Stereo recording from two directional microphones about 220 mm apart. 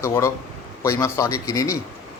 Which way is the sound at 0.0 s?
15° left (ahead or behind).